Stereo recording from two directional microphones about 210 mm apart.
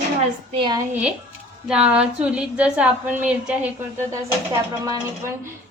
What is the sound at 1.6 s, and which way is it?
A woman's voice, 5° right (ahead or behind).